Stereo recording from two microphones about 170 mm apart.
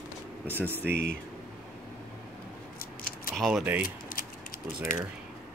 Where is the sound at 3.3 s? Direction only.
Centre (ahead or behind).